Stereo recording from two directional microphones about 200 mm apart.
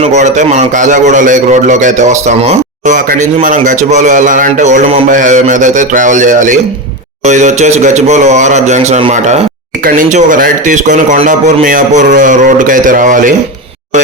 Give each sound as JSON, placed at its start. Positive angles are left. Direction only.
{"t": 0.1, "sound": "a man's voice", "side_deg": -35}